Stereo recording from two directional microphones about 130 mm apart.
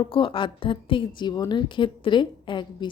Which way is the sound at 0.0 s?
40° left (ahead or behind).